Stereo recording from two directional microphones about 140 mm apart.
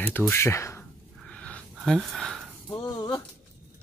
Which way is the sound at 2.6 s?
25° left (ahead or behind).